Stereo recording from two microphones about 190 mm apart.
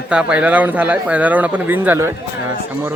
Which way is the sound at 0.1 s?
5° right (ahead or behind).